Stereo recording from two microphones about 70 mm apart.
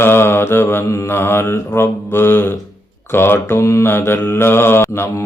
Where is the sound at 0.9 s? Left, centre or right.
Left.